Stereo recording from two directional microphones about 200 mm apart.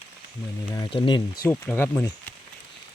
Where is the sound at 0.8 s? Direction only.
25° left (ahead or behind).